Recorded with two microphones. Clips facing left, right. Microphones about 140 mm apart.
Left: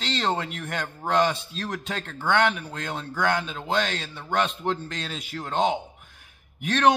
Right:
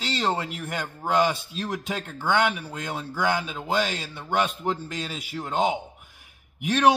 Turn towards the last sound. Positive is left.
turn(degrees=-10)  # may be behind; listen again after turning